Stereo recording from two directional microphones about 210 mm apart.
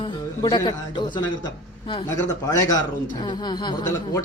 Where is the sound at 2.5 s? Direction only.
15° left (ahead or behind).